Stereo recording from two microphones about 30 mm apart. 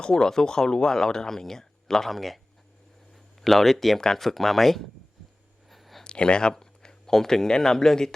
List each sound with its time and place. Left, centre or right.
0.0 s speech: left
2.0 s speech: centre
3.1 s a sound: centre
3.9 s speech: centre
4.2 s speech: centre
5.7 s a sound: centre
6.0 s speech: left
6.5 s speech: centre